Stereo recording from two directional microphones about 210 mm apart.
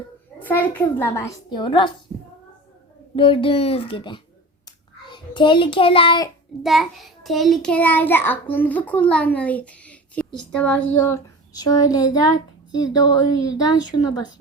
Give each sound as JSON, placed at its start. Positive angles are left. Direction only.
{"t": 0.4, "sound": "a child's voice", "side_deg": 10}
{"t": 2.1, "sound": "child singing", "side_deg": -30}
{"t": 3.2, "sound": "speech", "side_deg": 25}
{"t": 4.6, "sound": "child singing", "side_deg": 20}
{"t": 6.6, "sound": "a child's voice", "side_deg": 0}